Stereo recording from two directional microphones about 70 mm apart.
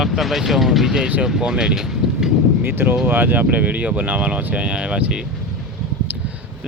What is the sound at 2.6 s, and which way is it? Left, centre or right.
Speech, right.